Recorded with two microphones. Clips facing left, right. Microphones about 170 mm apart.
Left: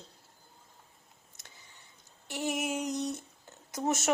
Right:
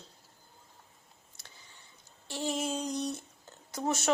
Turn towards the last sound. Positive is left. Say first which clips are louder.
# left 1 dB
turn(degrees=20)  # may be behind; listen again after turning